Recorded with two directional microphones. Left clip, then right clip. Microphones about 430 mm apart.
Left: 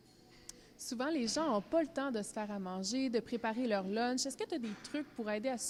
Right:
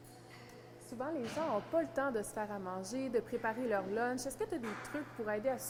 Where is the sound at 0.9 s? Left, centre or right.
Left.